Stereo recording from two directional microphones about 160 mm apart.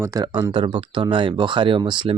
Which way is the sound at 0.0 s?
20° right (ahead or behind).